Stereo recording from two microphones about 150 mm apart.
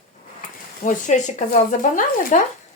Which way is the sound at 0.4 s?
60° left (ahead or behind).